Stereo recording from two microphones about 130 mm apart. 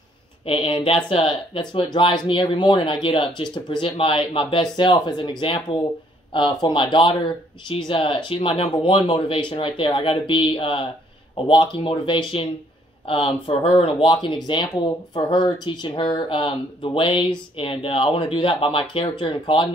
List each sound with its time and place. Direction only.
0.5 s speech: 45° left (ahead or behind)